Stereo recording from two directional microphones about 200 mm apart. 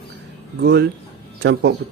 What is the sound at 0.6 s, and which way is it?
Speech, 55° right (ahead or behind).